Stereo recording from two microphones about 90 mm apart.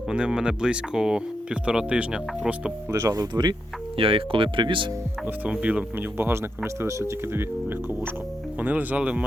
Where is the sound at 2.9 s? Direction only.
35° right (ahead or behind).